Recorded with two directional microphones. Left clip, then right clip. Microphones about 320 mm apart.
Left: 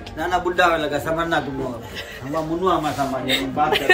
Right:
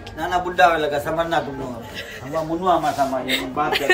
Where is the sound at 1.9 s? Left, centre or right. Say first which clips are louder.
Even; centre.